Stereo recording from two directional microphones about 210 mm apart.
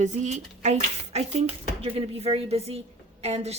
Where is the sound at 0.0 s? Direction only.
35° right (ahead or behind).